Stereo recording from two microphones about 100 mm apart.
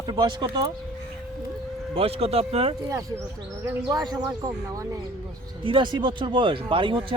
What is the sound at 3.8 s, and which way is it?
Speech, 40° right (ahead or behind).